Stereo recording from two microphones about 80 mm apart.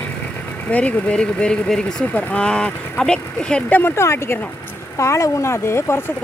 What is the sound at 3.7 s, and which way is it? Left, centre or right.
Speech, left.